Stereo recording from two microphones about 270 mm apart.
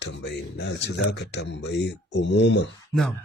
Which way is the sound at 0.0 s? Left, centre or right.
Left.